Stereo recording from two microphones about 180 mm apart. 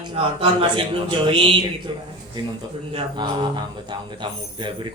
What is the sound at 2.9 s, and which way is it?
Speech, 25° right (ahead or behind).